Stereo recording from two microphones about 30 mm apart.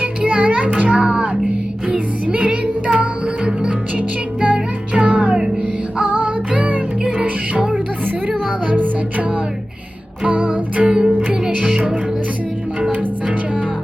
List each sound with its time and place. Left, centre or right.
0.0 s music: right
1.0 s music: right
2.2 s music: right
8.7 s music: right
10.2 s music: right
10.8 s music: right